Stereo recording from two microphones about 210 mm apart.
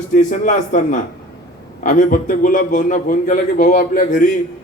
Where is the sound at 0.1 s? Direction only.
40° left (ahead or behind).